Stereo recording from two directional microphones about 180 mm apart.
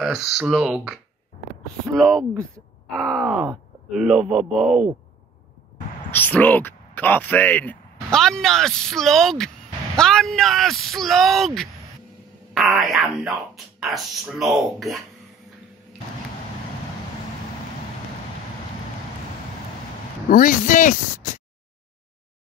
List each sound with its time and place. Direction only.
0.0 s speech: centre (ahead or behind)
2.0 s speech: 5° left (ahead or behind)
6.1 s speech: 10° left (ahead or behind)
20.2 s speech: 50° left (ahead or behind)